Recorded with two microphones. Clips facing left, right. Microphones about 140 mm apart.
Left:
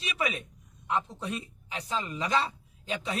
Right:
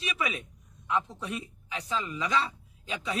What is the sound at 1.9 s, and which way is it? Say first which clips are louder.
Speech: left 1 dB; 40° left (ahead or behind).